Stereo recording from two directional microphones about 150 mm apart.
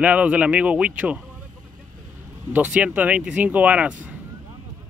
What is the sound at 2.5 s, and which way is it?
Speech, 10° right (ahead or behind).